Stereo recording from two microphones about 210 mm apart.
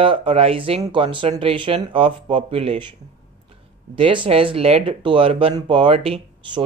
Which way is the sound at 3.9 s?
25° right (ahead or behind).